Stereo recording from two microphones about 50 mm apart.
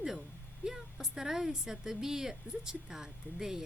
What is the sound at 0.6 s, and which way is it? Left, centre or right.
A woman's voice, centre.